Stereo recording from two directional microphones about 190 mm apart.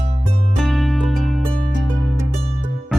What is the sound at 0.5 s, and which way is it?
Music, centre (ahead or behind).